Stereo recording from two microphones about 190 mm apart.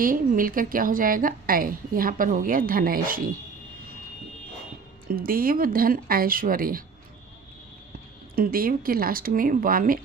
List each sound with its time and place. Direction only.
0.0 s a woman's voice: 45° right (ahead or behind)
5.0 s a woman's voice: 50° right (ahead or behind)
8.4 s a woman's voice: 50° right (ahead or behind)